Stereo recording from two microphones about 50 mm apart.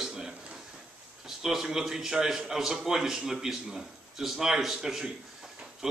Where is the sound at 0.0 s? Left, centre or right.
Centre.